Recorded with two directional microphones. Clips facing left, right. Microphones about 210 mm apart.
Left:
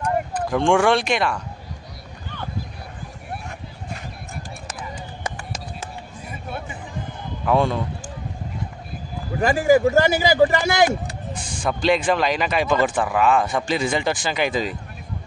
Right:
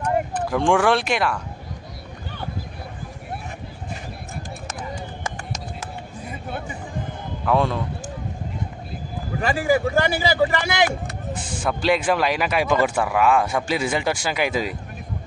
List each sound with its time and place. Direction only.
0.0 s speech: 5° right (ahead or behind)
7.4 s speech: centre (ahead or behind)
9.9 s a man's voice: 40° left (ahead or behind)
11.3 s speech: 5° right (ahead or behind)